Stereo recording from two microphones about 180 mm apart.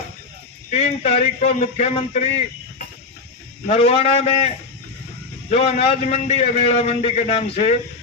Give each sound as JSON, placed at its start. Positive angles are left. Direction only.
{"t": 0.7, "sound": "a man's voice", "side_deg": 35}